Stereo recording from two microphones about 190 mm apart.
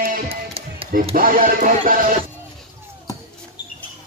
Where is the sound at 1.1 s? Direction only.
45° right (ahead or behind).